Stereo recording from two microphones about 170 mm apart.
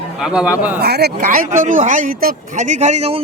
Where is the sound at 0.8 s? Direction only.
70° right (ahead or behind).